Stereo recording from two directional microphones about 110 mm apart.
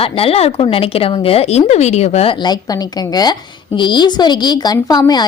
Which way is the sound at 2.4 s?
40° left (ahead or behind).